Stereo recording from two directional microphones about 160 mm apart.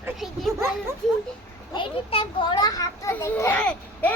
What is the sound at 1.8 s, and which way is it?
A child's voice, 35° left (ahead or behind).